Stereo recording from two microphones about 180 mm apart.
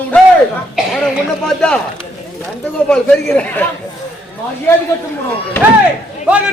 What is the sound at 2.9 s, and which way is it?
Speech, 5° left (ahead or behind).